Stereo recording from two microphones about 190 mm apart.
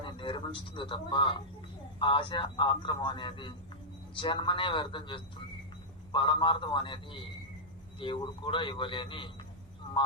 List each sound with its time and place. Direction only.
0.0 s a man's voice: 25° left (ahead or behind)